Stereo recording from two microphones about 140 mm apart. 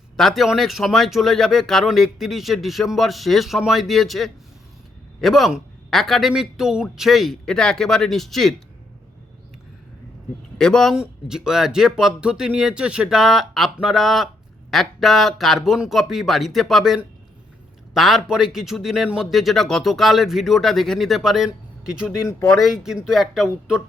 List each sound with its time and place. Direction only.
0.2 s speech: centre (ahead or behind)
10.6 s a man's voice: 5° left (ahead or behind)
22.3 s speech: 20° left (ahead or behind)
22.6 s speech: 5° right (ahead or behind)